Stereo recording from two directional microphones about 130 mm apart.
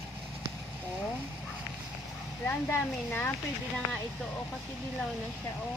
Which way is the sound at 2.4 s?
15° left (ahead or behind).